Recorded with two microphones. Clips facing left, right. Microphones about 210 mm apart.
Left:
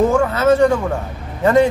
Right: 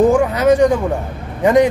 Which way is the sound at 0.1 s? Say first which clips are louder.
Right 2 dB; 15° right (ahead or behind).